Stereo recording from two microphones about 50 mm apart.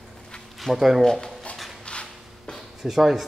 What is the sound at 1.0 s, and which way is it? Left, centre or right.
Speech, centre.